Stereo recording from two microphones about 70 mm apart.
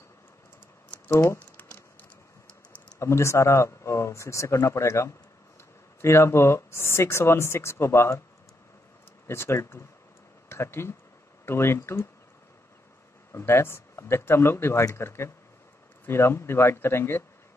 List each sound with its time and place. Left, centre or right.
1.0 s speech: left
3.0 s speech: left
9.3 s speech: left
13.3 s speech: left